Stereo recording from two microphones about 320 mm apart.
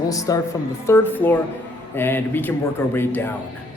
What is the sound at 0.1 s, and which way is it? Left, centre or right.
A man's voice, centre.